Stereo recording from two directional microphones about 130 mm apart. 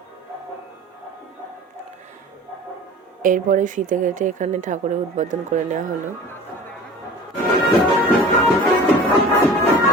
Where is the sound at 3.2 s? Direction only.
85° right.